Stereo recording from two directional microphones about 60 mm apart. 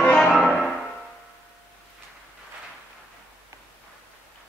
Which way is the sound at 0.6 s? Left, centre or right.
Centre.